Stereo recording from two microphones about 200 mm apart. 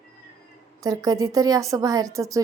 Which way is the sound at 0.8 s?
20° right (ahead or behind).